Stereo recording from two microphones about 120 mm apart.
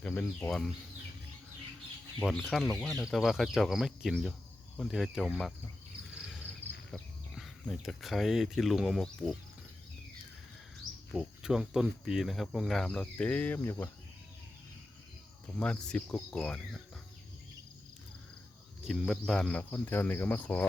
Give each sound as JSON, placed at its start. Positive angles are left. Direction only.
{"t": 0.0, "sound": "speech", "side_deg": 15}
{"t": 2.2, "sound": "speech", "side_deg": 0}
{"t": 2.6, "sound": "speech", "side_deg": 15}
{"t": 3.1, "sound": "speech", "side_deg": 0}
{"t": 6.1, "sound": "cricket", "side_deg": -5}
{"t": 6.9, "sound": "speech", "side_deg": 0}
{"t": 11.1, "sound": "speech", "side_deg": 0}
{"t": 15.5, "sound": "speech", "side_deg": 10}
{"t": 18.9, "sound": "speech", "side_deg": 0}